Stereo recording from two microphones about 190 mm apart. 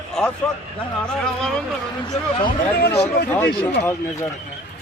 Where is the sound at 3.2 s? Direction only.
10° left (ahead or behind).